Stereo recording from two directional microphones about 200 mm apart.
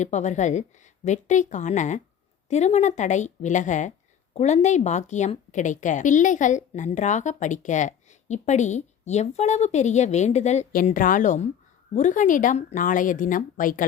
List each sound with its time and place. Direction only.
0.0 s a woman's voice: 35° left (ahead or behind)